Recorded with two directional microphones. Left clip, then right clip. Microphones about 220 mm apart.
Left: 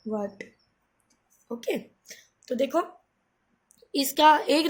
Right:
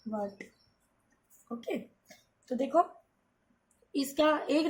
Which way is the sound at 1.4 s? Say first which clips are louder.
Left 7 dB; 45° left (ahead or behind).